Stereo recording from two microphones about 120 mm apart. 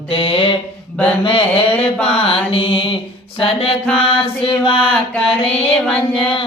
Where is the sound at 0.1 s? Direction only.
45° left (ahead or behind).